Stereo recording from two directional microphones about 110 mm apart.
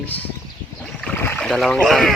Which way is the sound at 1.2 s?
20° left (ahead or behind).